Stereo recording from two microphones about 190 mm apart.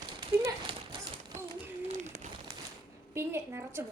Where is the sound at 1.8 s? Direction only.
40° right (ahead or behind).